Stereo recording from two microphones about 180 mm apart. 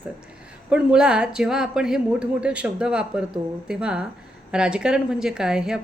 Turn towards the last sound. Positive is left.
turn(degrees=-5)  # may be behind; listen again after turning